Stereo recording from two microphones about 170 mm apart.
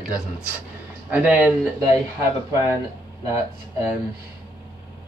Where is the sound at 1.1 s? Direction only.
10° right (ahead or behind).